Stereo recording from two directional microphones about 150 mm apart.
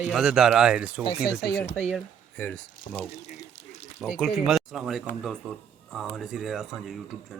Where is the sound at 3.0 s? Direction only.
45° left (ahead or behind).